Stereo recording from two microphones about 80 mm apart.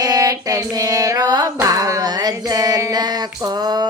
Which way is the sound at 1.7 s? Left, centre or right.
Right.